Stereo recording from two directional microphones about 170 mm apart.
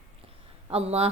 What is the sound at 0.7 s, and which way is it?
Speech, 35° right (ahead or behind).